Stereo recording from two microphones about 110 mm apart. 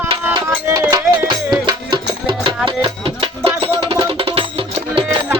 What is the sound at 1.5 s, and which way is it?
Music, 45° right (ahead or behind).